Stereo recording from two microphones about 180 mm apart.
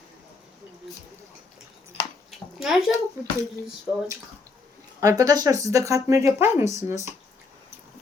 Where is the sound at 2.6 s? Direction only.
Centre (ahead or behind).